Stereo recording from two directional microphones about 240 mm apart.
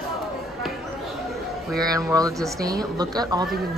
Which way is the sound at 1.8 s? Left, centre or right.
Centre.